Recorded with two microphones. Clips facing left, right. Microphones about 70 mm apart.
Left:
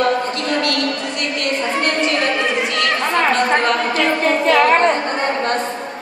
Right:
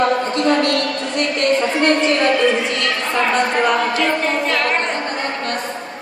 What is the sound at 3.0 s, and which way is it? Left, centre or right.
Chatter, left.